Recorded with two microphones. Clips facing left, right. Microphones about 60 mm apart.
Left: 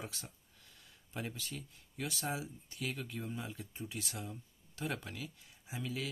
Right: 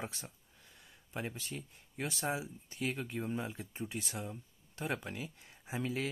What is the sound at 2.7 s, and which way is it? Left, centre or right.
Speech, right.